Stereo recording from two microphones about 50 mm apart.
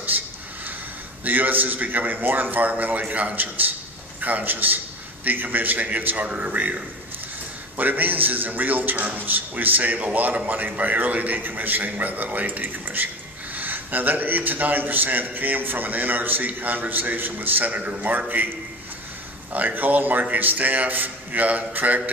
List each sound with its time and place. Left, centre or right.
0.1 s a sound: right
1.2 s a man's voice: right
19.5 s a man's voice: right